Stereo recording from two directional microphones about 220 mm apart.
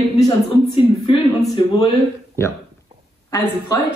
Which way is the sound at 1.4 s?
15° left (ahead or behind).